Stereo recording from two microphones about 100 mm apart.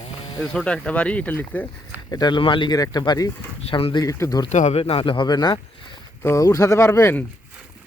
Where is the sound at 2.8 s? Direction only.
40° left (ahead or behind).